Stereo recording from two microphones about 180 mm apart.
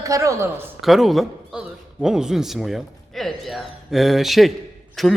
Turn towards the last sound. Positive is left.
turn(degrees=0)  # may be behind; listen again after turning